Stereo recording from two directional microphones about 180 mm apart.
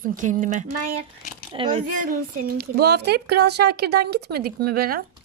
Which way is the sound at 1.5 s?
25° right (ahead or behind).